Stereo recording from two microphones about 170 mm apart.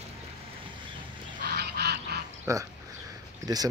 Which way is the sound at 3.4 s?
20° right (ahead or behind).